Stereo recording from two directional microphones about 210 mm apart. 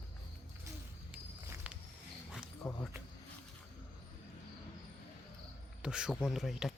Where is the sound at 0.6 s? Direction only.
10° right (ahead or behind).